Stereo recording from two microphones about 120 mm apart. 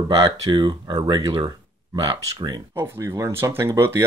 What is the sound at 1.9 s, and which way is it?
Speech, 35° right (ahead or behind).